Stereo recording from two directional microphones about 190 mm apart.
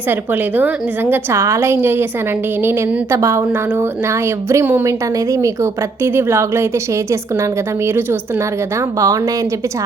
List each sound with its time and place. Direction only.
0.1 s a woman's voice: 10° right (ahead or behind)
9.0 s a woman's voice: 15° right (ahead or behind)